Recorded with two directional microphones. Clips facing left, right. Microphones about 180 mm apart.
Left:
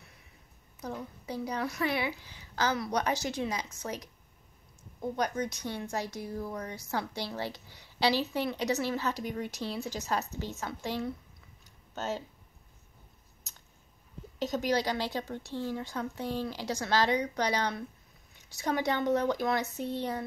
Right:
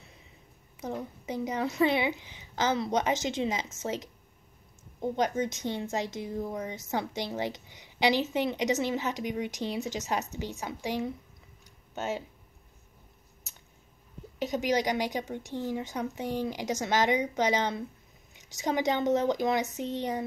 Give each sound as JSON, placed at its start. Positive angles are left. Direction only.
{"t": 0.7, "sound": "speech", "side_deg": -20}
{"t": 11.6, "sound": "a sound", "side_deg": -15}
{"t": 14.4, "sound": "a woman's voice", "side_deg": -15}